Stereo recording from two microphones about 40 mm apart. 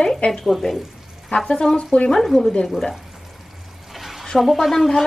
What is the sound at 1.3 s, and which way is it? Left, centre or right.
Speech, centre.